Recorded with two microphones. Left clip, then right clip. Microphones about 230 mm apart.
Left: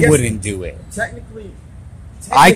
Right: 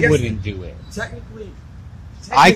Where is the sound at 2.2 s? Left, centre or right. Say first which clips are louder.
Left 2 dB; centre.